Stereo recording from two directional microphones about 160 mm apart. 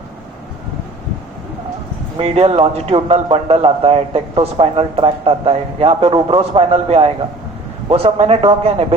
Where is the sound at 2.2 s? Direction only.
40° right (ahead or behind).